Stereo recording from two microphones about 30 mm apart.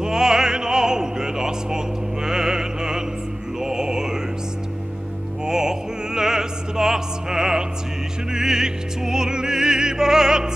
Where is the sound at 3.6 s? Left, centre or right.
Right.